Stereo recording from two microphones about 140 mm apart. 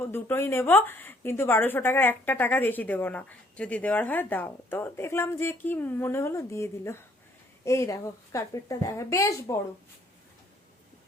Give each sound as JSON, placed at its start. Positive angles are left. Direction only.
{"t": 0.0, "sound": "a woman's voice", "side_deg": 15}